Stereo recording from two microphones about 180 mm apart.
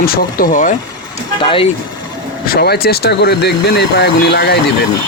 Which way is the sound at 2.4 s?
60° left (ahead or behind).